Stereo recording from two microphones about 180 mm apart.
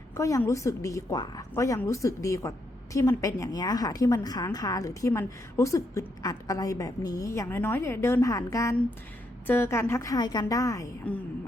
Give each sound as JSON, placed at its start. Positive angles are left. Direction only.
{"t": 0.2, "sound": "a woman's voice", "side_deg": 15}
{"t": 11.1, "sound": "a woman's voice", "side_deg": 5}